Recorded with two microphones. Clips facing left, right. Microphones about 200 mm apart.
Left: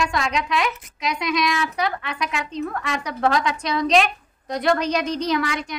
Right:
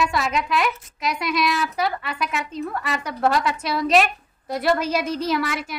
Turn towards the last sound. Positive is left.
turn(degrees=-5)  # may be behind; listen again after turning